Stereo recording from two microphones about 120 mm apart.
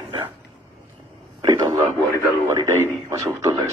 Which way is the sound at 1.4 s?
40° right (ahead or behind).